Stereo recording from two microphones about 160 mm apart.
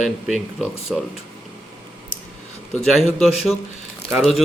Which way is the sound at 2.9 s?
Centre (ahead or behind).